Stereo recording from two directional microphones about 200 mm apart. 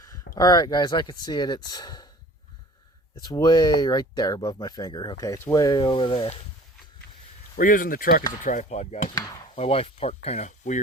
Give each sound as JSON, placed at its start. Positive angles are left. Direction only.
{"t": 0.3, "sound": "speech", "side_deg": 20}
{"t": 3.2, "sound": "speech", "side_deg": 20}
{"t": 7.6, "sound": "speech", "side_deg": 45}